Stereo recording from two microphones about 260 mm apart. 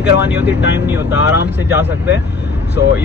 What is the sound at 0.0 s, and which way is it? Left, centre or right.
Speech, centre.